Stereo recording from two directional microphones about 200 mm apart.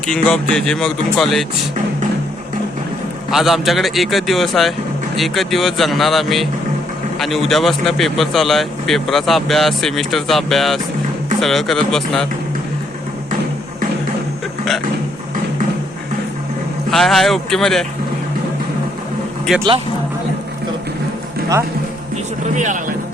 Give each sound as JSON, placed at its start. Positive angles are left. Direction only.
{"t": 0.1, "sound": "speech", "side_deg": 5}
{"t": 3.3, "sound": "speech", "side_deg": 0}
{"t": 16.9, "sound": "speech", "side_deg": 0}
{"t": 19.5, "sound": "speech", "side_deg": 0}
{"t": 22.5, "sound": "speech", "side_deg": -40}